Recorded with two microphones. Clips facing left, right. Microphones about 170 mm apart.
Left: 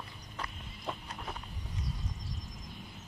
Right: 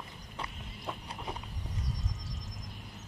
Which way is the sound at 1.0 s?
15° right (ahead or behind).